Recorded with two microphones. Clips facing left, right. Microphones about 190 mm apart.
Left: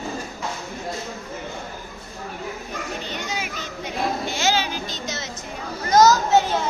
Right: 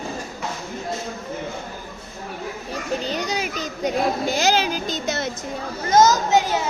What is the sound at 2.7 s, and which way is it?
Children playing, 35° right (ahead or behind).